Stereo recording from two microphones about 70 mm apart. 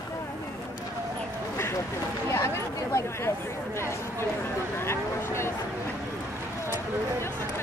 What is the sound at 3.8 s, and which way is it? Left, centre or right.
Speech, left.